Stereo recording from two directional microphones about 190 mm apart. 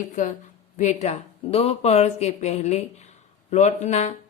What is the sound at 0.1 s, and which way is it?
A woman's voice, 40° left (ahead or behind).